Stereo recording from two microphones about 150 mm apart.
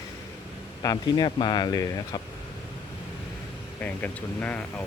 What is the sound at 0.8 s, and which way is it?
Speech, 25° left (ahead or behind).